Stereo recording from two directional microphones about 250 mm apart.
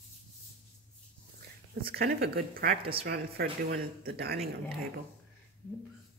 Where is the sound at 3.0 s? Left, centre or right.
Right.